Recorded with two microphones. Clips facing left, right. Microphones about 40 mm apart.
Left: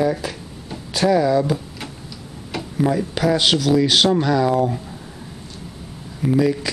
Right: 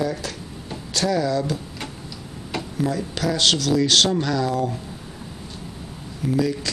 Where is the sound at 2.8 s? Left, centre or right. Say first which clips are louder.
Left 6 dB; centre.